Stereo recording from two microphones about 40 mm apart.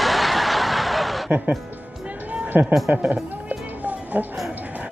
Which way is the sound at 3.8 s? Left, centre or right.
Right.